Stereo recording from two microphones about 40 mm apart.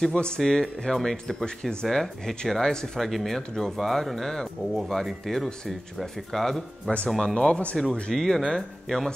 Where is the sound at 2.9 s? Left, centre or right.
Centre.